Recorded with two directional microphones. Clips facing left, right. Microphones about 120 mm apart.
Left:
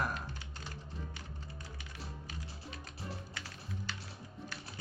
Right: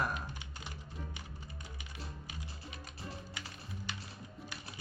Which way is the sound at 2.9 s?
Centre (ahead or behind).